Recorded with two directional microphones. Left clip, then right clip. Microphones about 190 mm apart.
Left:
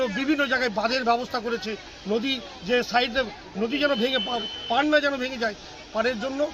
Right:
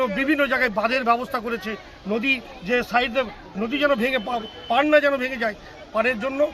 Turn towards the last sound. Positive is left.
turn(degrees=0)  # may be behind; listen again after turning